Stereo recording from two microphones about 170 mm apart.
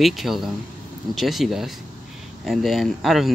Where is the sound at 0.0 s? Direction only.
Centre (ahead or behind).